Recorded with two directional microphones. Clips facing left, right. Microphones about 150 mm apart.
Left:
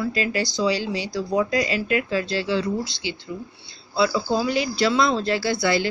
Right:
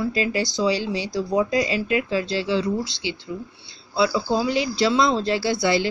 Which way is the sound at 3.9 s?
20° right (ahead or behind).